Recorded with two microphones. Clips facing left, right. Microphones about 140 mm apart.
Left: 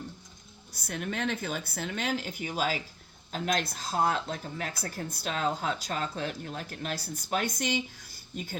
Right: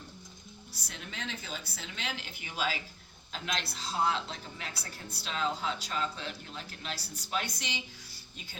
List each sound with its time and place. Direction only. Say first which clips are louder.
0.7 s speech: left 12 dB; 50° left (ahead or behind)